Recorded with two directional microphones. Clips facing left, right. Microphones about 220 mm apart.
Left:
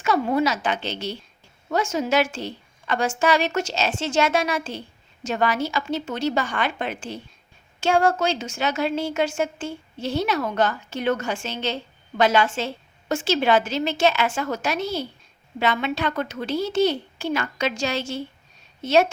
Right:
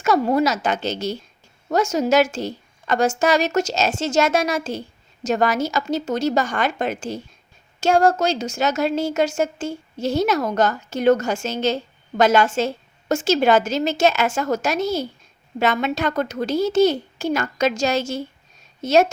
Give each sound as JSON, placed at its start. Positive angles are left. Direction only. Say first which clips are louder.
{"t": 0.0, "sound": "a woman's voice", "louder": "right 3 dB", "side_deg": -40}